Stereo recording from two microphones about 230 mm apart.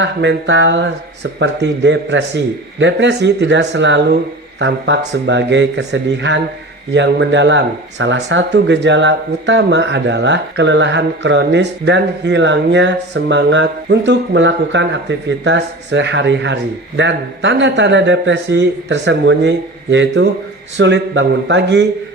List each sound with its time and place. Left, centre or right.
0.0 s speech: right